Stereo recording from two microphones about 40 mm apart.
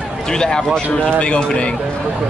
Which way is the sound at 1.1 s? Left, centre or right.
Left.